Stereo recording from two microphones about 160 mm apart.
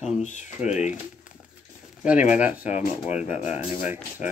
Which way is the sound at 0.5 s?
5° right (ahead or behind).